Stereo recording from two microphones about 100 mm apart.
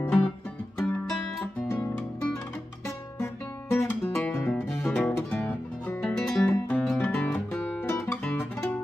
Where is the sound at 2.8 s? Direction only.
25° left (ahead or behind).